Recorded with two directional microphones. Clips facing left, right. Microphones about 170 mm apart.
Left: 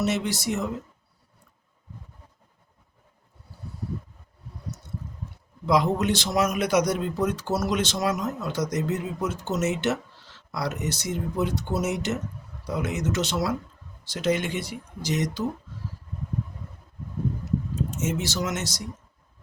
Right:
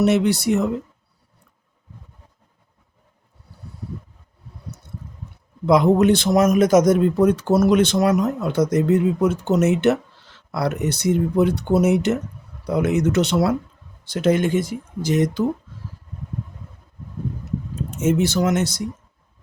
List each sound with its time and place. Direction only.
0.0 s speech: 60° right (ahead or behind)
5.6 s speech: 55° right (ahead or behind)
18.0 s speech: 55° right (ahead or behind)